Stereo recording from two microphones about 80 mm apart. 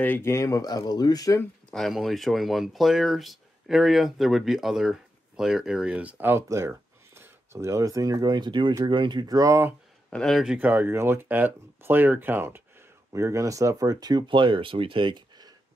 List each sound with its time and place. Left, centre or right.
0.0 s speech: left
0.6 s speech: left
1.7 s speech: centre
6.3 s speech: right
9.2 s speech: right
10.0 s a sound: centre
10.3 s speech: centre
10.6 s speech: right
13.1 s speech: right